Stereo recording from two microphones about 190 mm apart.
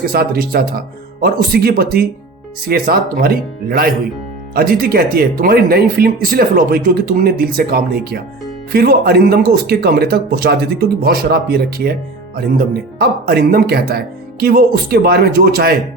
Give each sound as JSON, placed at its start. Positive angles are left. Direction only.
{"t": 0.0, "sound": "speech", "side_deg": -50}